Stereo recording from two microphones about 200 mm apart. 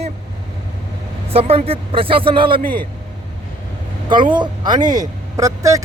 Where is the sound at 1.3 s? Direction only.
30° right (ahead or behind).